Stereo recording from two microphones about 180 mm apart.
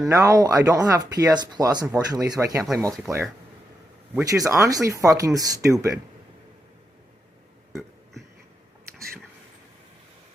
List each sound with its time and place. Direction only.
0.0 s speech: 20° right (ahead or behind)
7.7 s burping: centre (ahead or behind)